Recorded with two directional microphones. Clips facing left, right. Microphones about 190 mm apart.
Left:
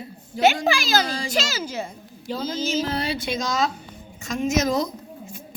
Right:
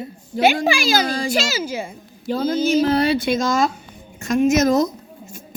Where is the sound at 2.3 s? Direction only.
55° right (ahead or behind).